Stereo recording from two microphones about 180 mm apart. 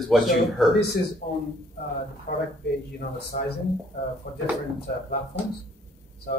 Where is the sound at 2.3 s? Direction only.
60° left (ahead or behind).